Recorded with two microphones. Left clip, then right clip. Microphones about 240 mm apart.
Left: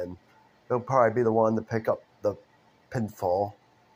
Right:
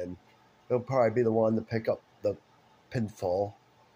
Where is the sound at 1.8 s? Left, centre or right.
Centre.